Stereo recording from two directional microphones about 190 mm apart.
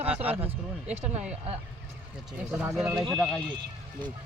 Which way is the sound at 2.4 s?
5° right (ahead or behind).